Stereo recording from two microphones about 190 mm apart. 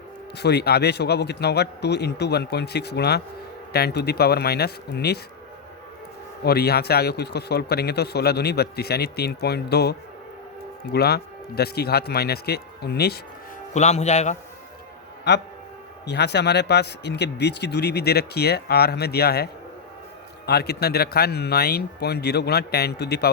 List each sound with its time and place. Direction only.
0.3 s speech: 60° left (ahead or behind)
6.4 s speech: 60° left (ahead or behind)
10.9 s speech: 60° left (ahead or behind)
13.7 s a man's voice: 35° left (ahead or behind)
15.3 s speech: 65° left (ahead or behind)
20.5 s speech: 60° left (ahead or behind)